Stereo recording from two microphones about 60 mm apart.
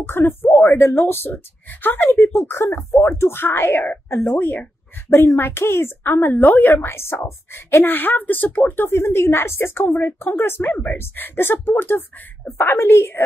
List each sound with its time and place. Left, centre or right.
0.0 s a woman's voice: left
5.1 s a woman's voice: left
7.8 s a woman's voice: left